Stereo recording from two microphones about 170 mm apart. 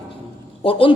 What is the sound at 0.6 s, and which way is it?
Speech, 30° left (ahead or behind).